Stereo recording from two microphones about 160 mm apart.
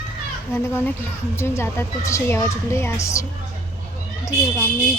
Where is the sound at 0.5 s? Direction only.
15° left (ahead or behind).